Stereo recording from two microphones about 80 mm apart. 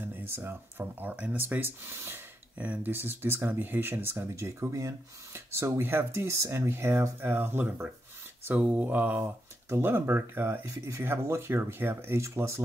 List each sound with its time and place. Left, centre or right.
0.0 s speech: right
2.5 s speech: centre; by 12.6 s right